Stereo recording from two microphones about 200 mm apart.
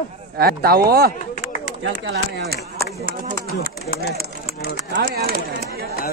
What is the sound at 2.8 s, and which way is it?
Speech, 45° right (ahead or behind).